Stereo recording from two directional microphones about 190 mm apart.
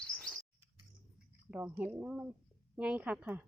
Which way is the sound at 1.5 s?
10° right (ahead or behind).